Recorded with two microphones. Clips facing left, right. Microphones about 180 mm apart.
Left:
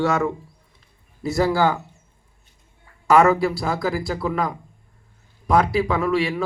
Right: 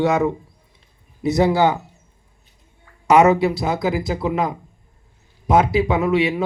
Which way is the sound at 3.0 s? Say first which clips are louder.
Right 2 dB; 20° right (ahead or behind).